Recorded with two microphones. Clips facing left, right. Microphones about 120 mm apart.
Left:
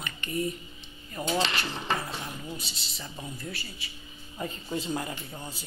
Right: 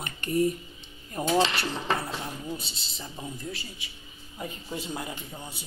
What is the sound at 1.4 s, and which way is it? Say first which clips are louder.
Speech: right 4 dB; 25° right (ahead or behind).